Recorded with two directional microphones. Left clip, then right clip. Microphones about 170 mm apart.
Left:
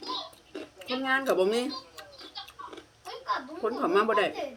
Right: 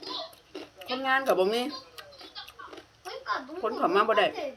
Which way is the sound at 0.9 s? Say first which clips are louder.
Right 1 dB; 20° left (ahead or behind).